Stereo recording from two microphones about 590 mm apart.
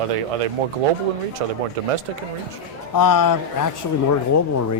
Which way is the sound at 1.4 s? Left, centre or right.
Right.